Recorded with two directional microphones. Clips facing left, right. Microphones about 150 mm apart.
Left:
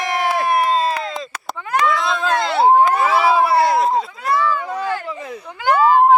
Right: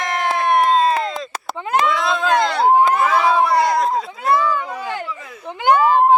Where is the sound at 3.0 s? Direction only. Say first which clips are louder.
Left 1 dB; 5° left (ahead or behind).